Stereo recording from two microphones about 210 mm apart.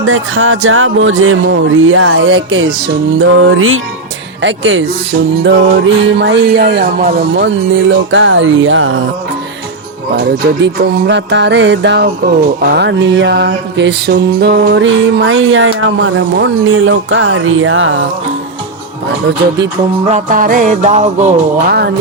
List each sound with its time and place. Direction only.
0.0 s music: 70° right (ahead or behind)
4.4 s mantra: 60° right (ahead or behind)
10.2 s mantra: 50° right (ahead or behind); by 18.0 s 65° right (ahead or behind)
20.1 s music: 35° right (ahead or behind)
21.7 s speech: 50° right (ahead or behind)